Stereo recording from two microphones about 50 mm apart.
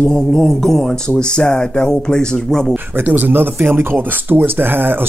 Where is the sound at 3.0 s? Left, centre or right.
Right.